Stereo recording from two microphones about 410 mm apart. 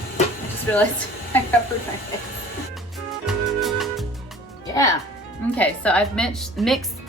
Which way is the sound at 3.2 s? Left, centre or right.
Centre.